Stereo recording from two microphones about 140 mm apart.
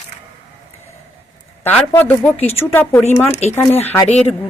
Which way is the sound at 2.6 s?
15° left (ahead or behind).